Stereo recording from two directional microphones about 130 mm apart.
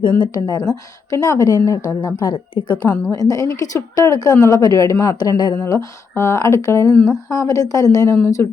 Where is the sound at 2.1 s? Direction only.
35° left (ahead or behind).